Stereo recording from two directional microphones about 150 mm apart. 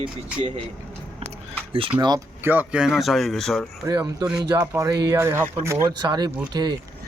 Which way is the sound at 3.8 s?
25° right (ahead or behind).